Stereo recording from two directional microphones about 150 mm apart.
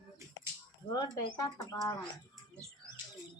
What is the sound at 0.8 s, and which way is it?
Speech, 30° left (ahead or behind).